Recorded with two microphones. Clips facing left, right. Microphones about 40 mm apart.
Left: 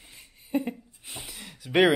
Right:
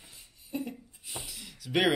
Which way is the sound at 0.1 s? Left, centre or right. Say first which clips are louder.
Left 9 dB; left.